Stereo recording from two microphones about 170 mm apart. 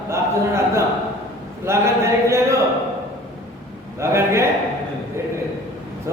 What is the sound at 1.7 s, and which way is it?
Speech, 15° right (ahead or behind).